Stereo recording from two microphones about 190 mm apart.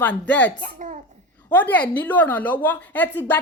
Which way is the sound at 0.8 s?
45° right (ahead or behind).